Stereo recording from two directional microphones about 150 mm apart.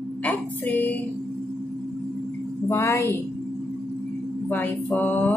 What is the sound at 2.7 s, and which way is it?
Speech, 15° left (ahead or behind).